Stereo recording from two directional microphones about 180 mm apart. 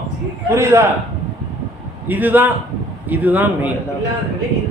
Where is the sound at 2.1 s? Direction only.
10° right (ahead or behind).